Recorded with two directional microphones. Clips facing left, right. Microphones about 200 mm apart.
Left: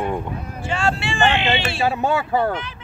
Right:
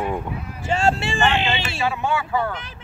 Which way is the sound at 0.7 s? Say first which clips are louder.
Right 2 dB; 40° right (ahead or behind).